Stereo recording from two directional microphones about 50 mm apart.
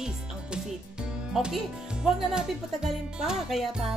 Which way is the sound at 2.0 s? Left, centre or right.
Centre.